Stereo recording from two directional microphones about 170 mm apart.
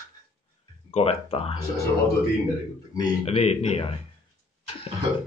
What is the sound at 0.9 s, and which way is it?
Speech, 35° left (ahead or behind).